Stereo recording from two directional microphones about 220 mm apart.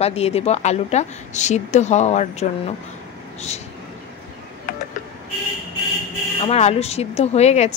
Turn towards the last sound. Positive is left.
turn(degrees=30)  # may be behind; listen again after turning